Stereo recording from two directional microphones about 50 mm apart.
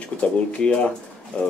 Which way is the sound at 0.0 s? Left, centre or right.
Left.